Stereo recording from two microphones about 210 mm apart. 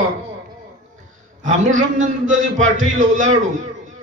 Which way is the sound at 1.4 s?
35° right (ahead or behind).